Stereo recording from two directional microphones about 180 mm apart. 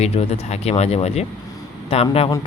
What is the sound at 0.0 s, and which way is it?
Speech, 35° left (ahead or behind).